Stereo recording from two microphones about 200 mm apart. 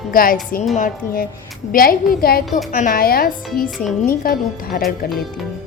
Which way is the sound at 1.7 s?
45° left (ahead or behind).